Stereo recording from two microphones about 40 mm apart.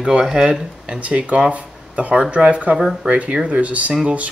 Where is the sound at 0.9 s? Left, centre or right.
Right.